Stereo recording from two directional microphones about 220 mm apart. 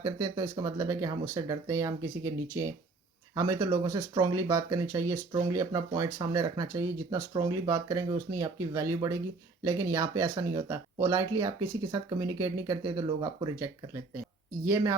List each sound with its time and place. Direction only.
0.0 s speech: 15° right (ahead or behind)